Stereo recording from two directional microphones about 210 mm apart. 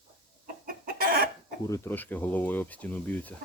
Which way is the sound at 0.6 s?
45° right (ahead or behind).